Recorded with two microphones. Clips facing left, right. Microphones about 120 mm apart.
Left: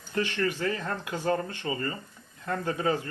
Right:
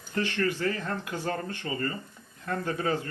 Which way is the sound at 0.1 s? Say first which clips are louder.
Even; 15° left (ahead or behind).